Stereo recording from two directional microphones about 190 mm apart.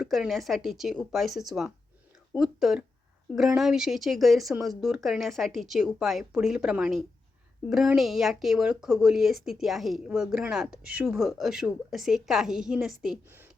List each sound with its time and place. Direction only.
0.0 s speech: centre (ahead or behind)